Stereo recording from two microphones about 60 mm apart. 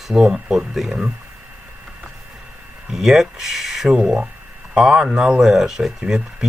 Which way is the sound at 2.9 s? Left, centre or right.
Centre.